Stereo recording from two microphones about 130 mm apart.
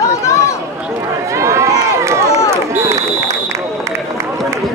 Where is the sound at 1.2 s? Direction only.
20° right (ahead or behind).